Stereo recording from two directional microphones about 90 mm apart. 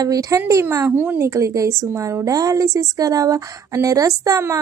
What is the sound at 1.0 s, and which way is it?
A woman's voice, 25° right (ahead or behind).